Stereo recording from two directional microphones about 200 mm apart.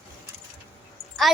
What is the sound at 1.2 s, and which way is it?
Speech, centre (ahead or behind).